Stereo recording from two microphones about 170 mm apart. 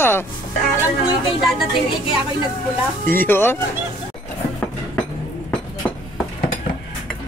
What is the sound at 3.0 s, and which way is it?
Speech, 10° left (ahead or behind).